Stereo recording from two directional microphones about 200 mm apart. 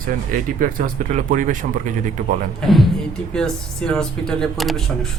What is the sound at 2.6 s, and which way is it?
Speech, centre (ahead or behind).